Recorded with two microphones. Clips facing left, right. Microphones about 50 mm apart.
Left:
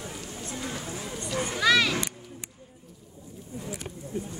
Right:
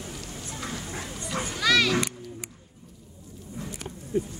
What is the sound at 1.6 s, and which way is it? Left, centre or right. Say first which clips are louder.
Children playing: even; centre.